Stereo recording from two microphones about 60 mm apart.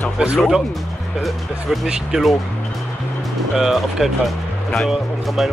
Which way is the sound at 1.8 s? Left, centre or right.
Centre.